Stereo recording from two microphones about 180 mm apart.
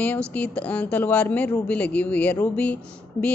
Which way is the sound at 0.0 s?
10° left (ahead or behind).